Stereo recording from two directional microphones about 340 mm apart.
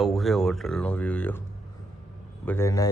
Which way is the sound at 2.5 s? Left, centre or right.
Centre.